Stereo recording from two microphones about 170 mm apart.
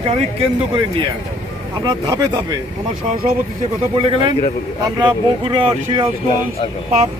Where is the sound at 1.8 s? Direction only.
25° right (ahead or behind).